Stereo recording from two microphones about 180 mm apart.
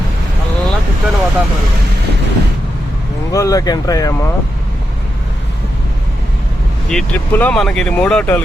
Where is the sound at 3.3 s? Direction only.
20° left (ahead or behind).